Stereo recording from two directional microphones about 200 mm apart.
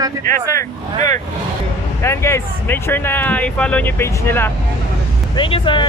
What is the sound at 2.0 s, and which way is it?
Speech, 15° left (ahead or behind).